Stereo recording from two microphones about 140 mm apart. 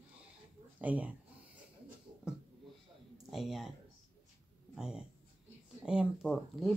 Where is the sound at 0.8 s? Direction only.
10° right (ahead or behind).